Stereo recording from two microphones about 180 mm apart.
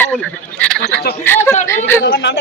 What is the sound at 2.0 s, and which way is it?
Speech, 75° left (ahead or behind).